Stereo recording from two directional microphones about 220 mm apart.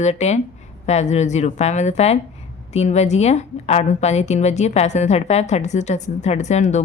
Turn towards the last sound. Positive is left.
turn(degrees=30)  # may be behind; listen again after turning